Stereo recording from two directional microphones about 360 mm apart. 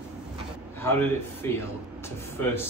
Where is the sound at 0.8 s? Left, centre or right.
Centre.